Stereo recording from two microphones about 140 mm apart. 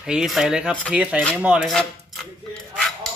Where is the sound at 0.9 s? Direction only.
10° right (ahead or behind).